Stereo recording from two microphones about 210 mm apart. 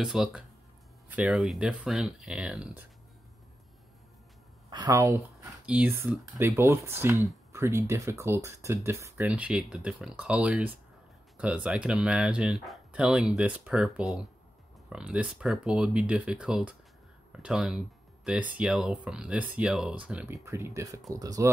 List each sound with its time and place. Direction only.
0.0 s speech: 5° right (ahead or behind)
4.6 s speech: 20° right (ahead or behind)